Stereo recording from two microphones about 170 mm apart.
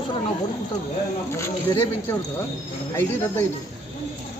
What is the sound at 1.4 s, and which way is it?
Speech, 15° left (ahead or behind).